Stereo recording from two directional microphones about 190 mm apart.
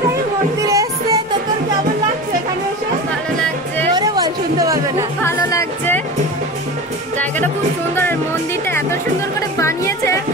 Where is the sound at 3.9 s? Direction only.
20° right (ahead or behind).